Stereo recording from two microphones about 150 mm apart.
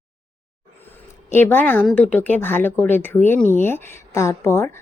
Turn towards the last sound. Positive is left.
turn(degrees=15)  # may be behind; listen again after turning